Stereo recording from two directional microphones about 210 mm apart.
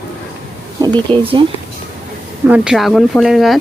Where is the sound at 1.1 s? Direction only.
25° right (ahead or behind).